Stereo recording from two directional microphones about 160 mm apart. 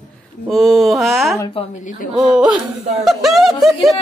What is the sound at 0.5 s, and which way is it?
Mantra, centre (ahead or behind).